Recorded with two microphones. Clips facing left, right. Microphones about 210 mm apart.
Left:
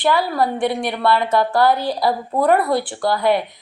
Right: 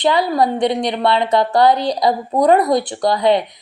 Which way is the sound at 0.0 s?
20° right (ahead or behind).